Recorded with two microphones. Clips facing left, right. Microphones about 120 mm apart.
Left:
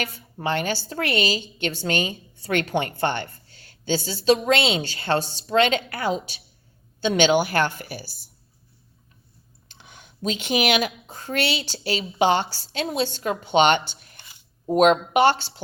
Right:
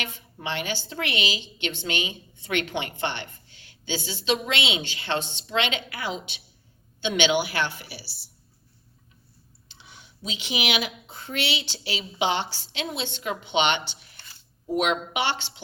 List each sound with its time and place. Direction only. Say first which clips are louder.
0.0 s a woman's voice: left 6 dB; 45° left (ahead or behind)
9.6 s speech: left 2 dB; 50° left (ahead or behind)
14.2 s a sound: left 1 dB; 15° left (ahead or behind)
14.7 s a woman's voice: left 8 dB; 45° left (ahead or behind)